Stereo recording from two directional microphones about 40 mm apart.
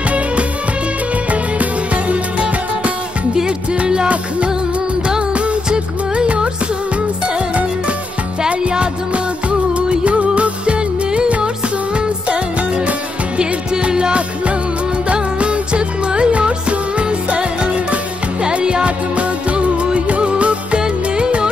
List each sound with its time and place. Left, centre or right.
1.3 s music: right
5.3 s music: right